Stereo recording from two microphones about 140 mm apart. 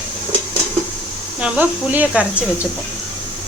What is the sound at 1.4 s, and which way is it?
Speech, 10° right (ahead or behind).